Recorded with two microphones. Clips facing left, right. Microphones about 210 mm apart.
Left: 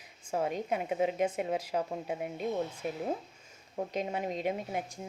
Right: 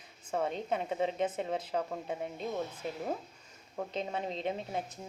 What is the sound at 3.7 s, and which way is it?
A woman's voice, 15° left (ahead or behind).